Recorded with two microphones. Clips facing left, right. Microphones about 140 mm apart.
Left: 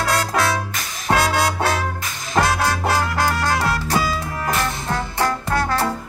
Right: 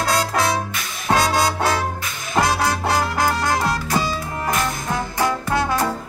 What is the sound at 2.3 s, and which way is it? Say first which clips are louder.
Music: even; 15° right (ahead or behind).